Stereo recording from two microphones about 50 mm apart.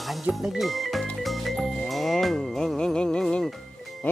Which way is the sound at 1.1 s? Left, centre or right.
Centre.